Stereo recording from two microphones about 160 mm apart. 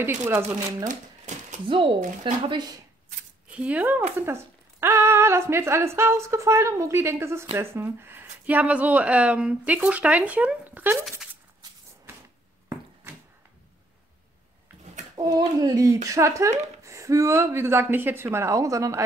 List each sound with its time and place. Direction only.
0.0 s speech: 15° right (ahead or behind)
0.8 s a sound: 50° right (ahead or behind)
2.0 s a woman's voice: 45° right (ahead or behind)
3.4 s speech: 10° right (ahead or behind)
15.1 s speech: 25° right (ahead or behind)